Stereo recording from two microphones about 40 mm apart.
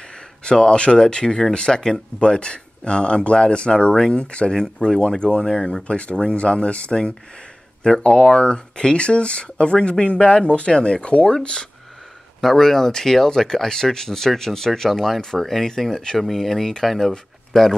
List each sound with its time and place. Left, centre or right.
0.5 s speech: left
4.6 s speech: centre
12.4 s speech: centre